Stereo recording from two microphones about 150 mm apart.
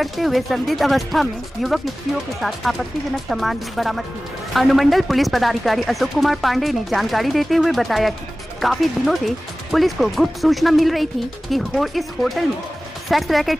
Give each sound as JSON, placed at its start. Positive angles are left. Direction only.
{"t": 0.0, "sound": "speech", "side_deg": 0}